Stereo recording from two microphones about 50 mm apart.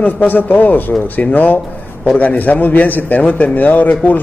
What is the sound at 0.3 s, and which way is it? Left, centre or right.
Speech, left.